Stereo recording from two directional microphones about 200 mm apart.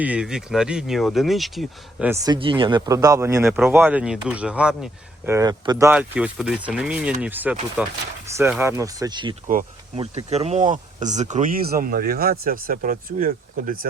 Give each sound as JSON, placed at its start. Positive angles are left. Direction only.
{"t": 0.0, "sound": "speech", "side_deg": -5}
{"t": 2.0, "sound": "speech", "side_deg": -20}
{"t": 5.3, "sound": "speech", "side_deg": -20}
{"t": 5.9, "sound": "speech", "side_deg": -5}
{"t": 9.5, "sound": "speech", "side_deg": -40}
{"t": 10.0, "sound": "speech", "side_deg": -30}